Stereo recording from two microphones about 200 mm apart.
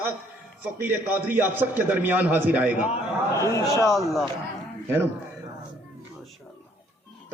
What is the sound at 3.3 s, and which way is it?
Speech, 15° left (ahead or behind).